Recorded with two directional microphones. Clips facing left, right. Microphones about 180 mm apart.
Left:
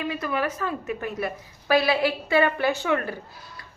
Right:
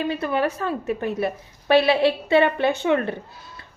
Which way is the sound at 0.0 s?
30° right (ahead or behind).